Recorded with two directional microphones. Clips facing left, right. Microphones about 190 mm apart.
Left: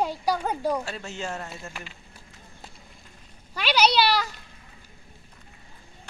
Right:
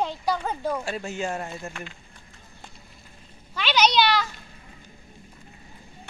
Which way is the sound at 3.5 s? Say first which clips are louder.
Even; 10° left (ahead or behind).